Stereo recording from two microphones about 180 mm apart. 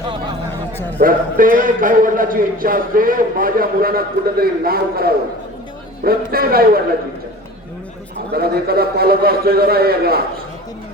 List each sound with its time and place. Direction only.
0.9 s a man's voice: 50° right (ahead or behind)
8.3 s a man's voice: 60° right (ahead or behind)